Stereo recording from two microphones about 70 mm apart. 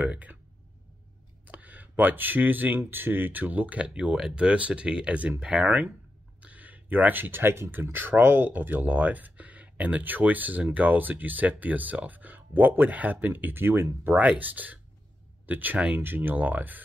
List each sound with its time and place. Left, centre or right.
0.0 s speech: right
1.4 s a sound: right
2.8 s speech: right
14.0 s speech: right